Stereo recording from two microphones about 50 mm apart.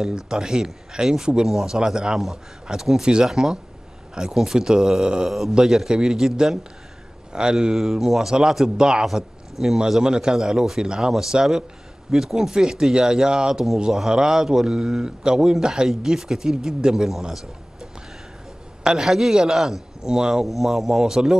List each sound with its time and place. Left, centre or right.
0.0 s a man's voice: centre
7.7 s a man's voice: centre
9.0 s a man's voice: centre
18.9 s a man's voice: centre
20.4 s a man's voice: centre